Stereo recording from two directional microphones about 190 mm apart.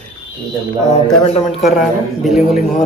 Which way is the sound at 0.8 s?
35° left (ahead or behind).